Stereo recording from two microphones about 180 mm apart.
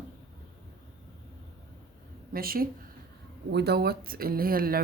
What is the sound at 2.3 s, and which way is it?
Speech, 55° right (ahead or behind).